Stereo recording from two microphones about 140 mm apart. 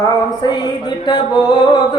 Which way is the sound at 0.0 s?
30° left (ahead or behind).